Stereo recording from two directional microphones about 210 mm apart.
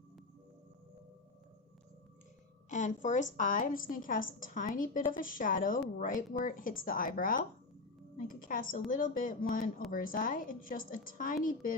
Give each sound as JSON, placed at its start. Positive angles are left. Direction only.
{"t": 2.6, "sound": "a woman's voice", "side_deg": 35}